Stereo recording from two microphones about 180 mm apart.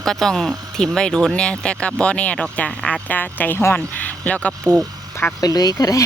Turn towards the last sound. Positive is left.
turn(degrees=20)  # may be behind; listen again after turning